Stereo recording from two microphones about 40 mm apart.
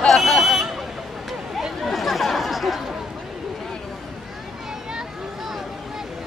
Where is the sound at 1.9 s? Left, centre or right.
Centre.